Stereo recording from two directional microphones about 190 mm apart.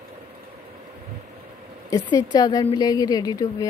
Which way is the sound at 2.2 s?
20° left (ahead or behind).